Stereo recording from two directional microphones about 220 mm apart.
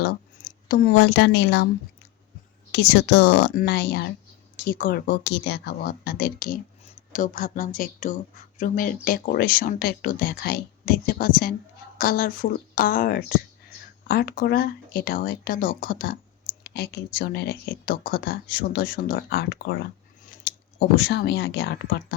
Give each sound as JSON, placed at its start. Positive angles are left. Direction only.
{"t": 0.0, "sound": "a woman's voice", "side_deg": 40}
{"t": 2.7, "sound": "a woman's voice", "side_deg": 50}